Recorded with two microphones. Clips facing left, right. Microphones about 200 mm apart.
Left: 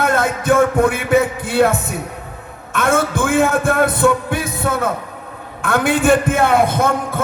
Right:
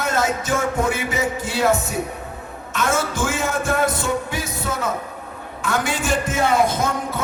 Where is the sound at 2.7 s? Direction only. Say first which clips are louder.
Left 5 dB; 55° left (ahead or behind).